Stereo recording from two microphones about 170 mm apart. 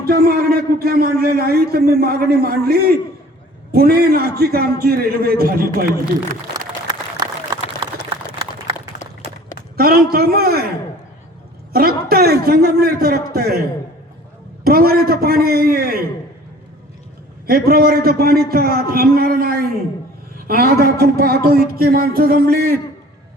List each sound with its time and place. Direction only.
0.0 s a man's voice: 65° right (ahead or behind)
9.7 s a man's voice: 60° right (ahead or behind)
11.7 s a man's voice: 60° right (ahead or behind)
17.4 s a man's voice: 60° right (ahead or behind)